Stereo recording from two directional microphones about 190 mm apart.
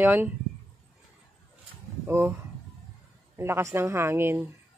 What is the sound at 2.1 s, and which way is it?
Speech, 15° right (ahead or behind).